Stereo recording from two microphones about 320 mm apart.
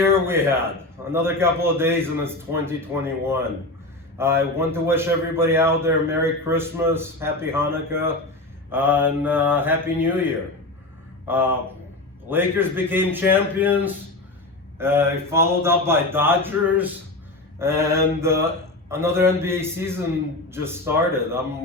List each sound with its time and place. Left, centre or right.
0.0 s a man's voice: centre
11.3 s a man's voice: centre